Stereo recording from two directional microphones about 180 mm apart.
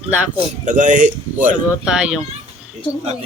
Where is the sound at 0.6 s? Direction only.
45° right (ahead or behind).